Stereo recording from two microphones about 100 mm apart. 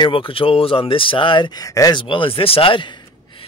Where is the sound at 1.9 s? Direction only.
60° left (ahead or behind).